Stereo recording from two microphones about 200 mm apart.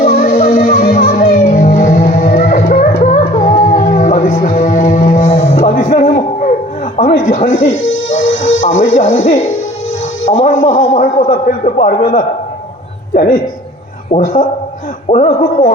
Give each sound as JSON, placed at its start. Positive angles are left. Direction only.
{"t": 0.0, "sound": "music", "side_deg": 45}
{"t": 5.7, "sound": "music", "side_deg": 45}
{"t": 6.1, "sound": "a sound", "side_deg": 40}
{"t": 7.3, "sound": "music", "side_deg": 45}
{"t": 9.0, "sound": "a man's voice", "side_deg": 40}
{"t": 10.3, "sound": "a sound", "side_deg": 40}
{"t": 13.1, "sound": "a man's voice", "side_deg": 45}
{"t": 14.1, "sound": "a man's voice", "side_deg": 30}